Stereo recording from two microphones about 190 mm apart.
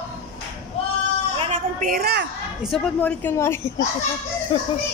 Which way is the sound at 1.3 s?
35° right (ahead or behind).